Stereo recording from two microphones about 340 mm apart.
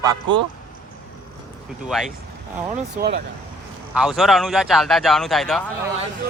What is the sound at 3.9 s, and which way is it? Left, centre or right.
Speech, centre.